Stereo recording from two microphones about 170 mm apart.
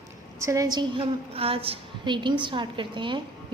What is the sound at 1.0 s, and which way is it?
A woman's voice, 35° right (ahead or behind).